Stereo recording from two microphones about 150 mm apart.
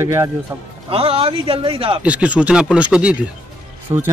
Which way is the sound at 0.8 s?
40° right (ahead or behind).